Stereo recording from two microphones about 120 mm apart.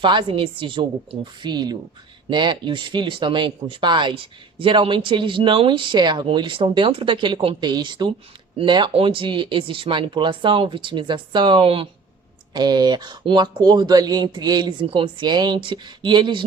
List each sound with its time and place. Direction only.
0.0 s speech: 45° right (ahead or behind)
12.5 s speech: 35° right (ahead or behind)